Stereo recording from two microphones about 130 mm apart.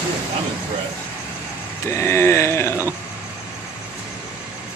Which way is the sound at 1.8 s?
20° left (ahead or behind).